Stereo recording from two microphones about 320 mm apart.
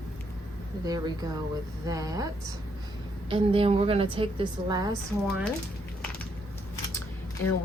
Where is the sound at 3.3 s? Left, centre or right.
Centre.